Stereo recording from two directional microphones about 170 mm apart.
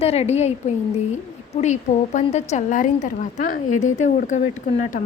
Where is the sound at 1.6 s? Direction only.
45° left (ahead or behind).